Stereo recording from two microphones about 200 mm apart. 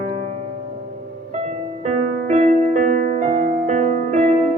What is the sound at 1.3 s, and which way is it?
Music, 35° right (ahead or behind).